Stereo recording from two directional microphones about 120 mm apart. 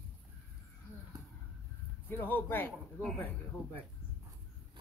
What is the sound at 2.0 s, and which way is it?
Speech, 15° left (ahead or behind).